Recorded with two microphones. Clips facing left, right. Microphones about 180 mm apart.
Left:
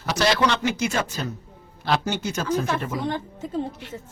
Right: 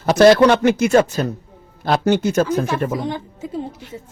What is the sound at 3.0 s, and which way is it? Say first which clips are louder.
Speech: right 2 dB; 10° right (ahead or behind).